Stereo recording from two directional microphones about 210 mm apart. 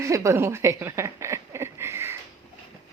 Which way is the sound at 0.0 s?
15° right (ahead or behind).